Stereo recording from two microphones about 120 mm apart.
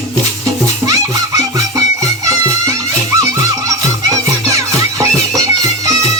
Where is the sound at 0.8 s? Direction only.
30° right (ahead or behind).